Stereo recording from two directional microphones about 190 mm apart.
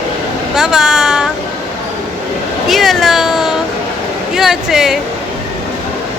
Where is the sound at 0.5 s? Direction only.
5° right (ahead or behind).